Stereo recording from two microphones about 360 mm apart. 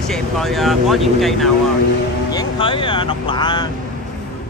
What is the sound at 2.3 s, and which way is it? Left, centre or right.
Speech, centre.